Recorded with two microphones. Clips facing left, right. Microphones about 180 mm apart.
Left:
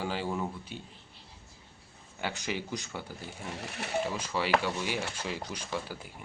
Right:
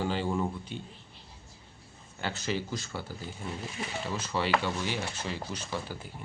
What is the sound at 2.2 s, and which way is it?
Speech, 15° left (ahead or behind).